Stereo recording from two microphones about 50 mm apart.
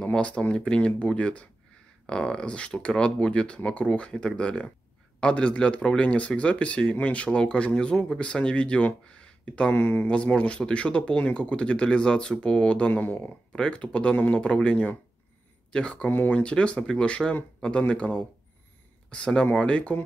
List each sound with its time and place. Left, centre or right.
0.0 s speech: left
9.8 s speech: left
10.0 s speech: left
13.0 s speech: left
13.5 s speech: centre
14.1 s speech: left
14.4 s speech: left
16.1 s speech: left
16.3 s speech: left